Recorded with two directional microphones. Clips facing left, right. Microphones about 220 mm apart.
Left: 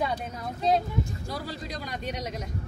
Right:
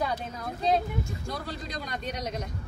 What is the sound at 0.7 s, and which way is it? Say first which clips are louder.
A man's voice: left 1 dB; centre (ahead or behind).